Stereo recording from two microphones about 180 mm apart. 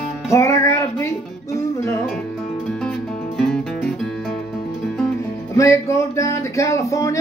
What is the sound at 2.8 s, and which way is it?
Music, 5° left (ahead or behind).